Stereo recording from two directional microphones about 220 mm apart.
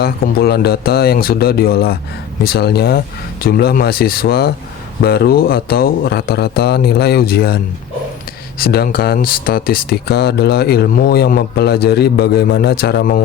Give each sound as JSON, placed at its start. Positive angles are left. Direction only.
{"t": 0.0, "sound": "speech", "side_deg": 45}